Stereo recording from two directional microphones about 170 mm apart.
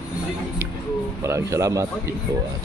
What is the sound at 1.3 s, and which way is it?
Speech, 15° right (ahead or behind).